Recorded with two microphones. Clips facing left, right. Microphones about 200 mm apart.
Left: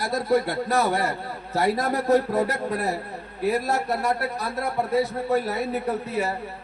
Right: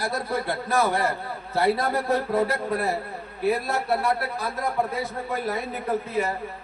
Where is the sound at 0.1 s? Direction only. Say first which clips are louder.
Left 5 dB; 40° left (ahead or behind).